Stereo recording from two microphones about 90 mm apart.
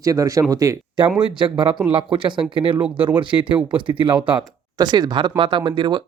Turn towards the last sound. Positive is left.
turn(degrees=-60)  # may be behind; listen again after turning